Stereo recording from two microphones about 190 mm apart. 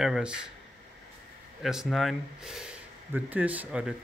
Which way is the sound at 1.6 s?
Centre (ahead or behind).